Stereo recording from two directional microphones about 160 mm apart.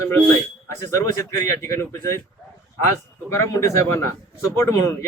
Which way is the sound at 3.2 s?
15° left (ahead or behind).